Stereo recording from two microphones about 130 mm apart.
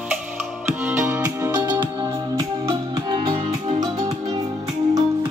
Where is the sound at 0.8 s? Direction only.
15° right (ahead or behind); by 4.4 s 30° right (ahead or behind).